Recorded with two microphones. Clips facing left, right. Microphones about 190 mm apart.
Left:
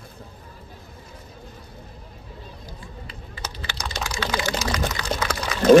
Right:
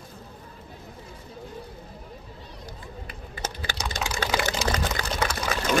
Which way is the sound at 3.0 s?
50° right (ahead or behind).